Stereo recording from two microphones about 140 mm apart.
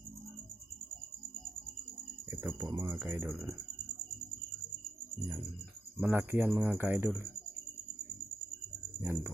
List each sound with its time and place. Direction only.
2.3 s speech: 15° right (ahead or behind)
2.6 s speech: 40° right (ahead or behind)
2.9 s speech: 20° right (ahead or behind)
3.2 s speech: centre (ahead or behind)
6.0 s speech: 10° right (ahead or behind)
9.0 s speech: 15° right (ahead or behind)